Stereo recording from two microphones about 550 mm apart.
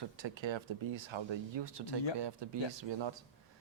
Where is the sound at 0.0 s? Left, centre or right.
Right.